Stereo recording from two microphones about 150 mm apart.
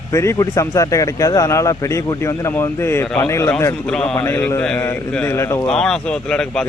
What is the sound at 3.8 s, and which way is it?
A man's voice, 5° left (ahead or behind).